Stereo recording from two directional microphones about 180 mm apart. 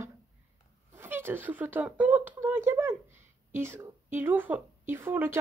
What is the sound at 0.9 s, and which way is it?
A woman's voice, 10° right (ahead or behind).